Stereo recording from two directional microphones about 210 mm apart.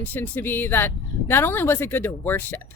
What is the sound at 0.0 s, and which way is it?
Speech, 10° left (ahead or behind).